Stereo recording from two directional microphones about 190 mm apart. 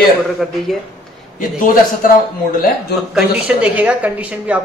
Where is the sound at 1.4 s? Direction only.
45° left (ahead or behind).